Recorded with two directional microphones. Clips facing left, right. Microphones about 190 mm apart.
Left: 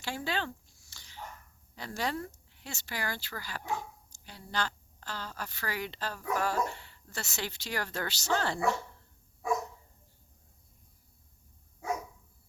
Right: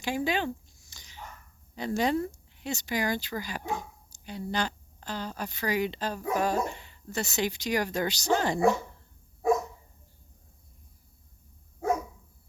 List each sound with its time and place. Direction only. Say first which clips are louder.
0.0 s dog: right 6 dB; 15° right (ahead or behind)
1.7 s speech: right 8 dB; 20° right (ahead or behind)